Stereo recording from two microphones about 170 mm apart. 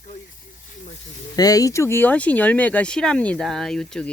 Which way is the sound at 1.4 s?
20° left (ahead or behind).